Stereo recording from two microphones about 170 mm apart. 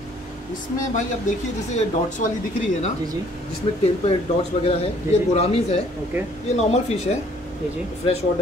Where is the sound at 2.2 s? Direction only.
50° left (ahead or behind).